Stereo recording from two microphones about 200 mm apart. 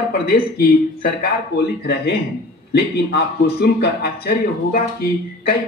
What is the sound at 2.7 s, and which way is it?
A man's voice, 55° left (ahead or behind).